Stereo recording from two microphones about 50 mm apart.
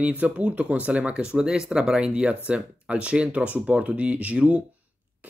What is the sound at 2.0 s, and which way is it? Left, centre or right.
Speech, right.